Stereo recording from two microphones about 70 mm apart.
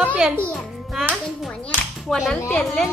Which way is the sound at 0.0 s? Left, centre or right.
Centre.